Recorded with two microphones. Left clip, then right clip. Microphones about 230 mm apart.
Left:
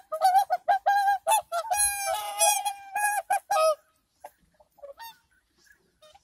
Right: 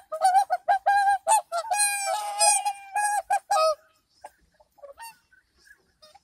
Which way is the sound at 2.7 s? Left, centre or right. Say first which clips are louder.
Right 3 dB; centre.